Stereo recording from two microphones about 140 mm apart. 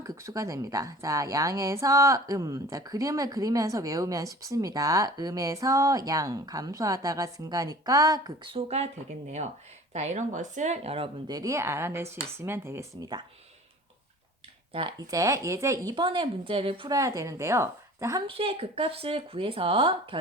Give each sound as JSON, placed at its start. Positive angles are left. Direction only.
{"t": 0.0, "sound": "a woman's voice", "side_deg": -25}
{"t": 8.4, "sound": "speech", "side_deg": -45}
{"t": 9.9, "sound": "speech", "side_deg": -55}
{"t": 11.3, "sound": "a woman's voice", "side_deg": -25}
{"t": 14.7, "sound": "speech", "side_deg": -35}
{"t": 16.9, "sound": "a woman's voice", "side_deg": -25}
{"t": 18.3, "sound": "speech", "side_deg": -40}